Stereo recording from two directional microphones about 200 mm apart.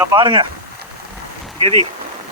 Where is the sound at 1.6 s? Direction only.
30° right (ahead or behind).